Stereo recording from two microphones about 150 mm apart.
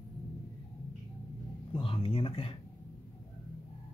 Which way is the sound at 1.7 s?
35° left (ahead or behind).